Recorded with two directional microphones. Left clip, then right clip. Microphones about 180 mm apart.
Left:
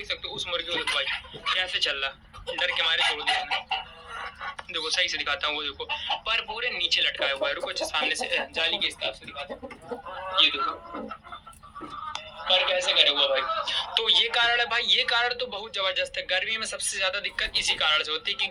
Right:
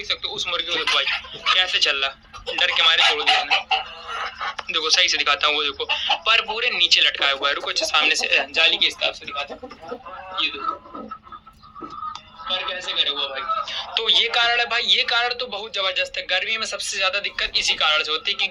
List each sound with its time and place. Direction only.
0.1 s speech: 20° right (ahead or behind)
10.3 s speech: 30° left (ahead or behind)
12.5 s speech: 40° left (ahead or behind)
13.6 s speech: 15° left (ahead or behind)
13.9 s a man's voice: 10° right (ahead or behind)